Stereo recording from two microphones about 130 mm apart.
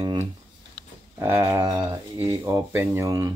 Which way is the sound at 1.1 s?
20° right (ahead or behind).